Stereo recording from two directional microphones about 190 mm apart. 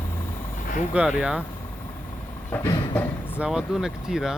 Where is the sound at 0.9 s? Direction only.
5° right (ahead or behind).